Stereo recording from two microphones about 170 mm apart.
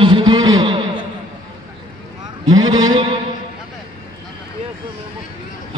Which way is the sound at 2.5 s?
25° right (ahead or behind).